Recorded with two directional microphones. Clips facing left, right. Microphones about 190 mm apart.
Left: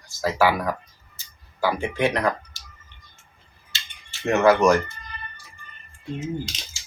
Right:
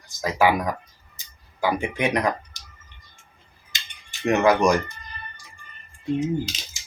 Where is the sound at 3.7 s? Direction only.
15° right (ahead or behind).